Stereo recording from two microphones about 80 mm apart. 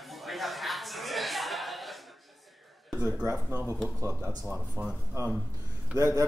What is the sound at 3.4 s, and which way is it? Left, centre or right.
Speech, right.